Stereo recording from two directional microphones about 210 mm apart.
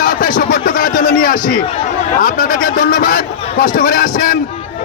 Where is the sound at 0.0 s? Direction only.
40° left (ahead or behind).